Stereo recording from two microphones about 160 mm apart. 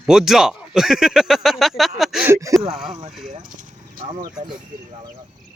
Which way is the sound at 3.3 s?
55° right (ahead or behind).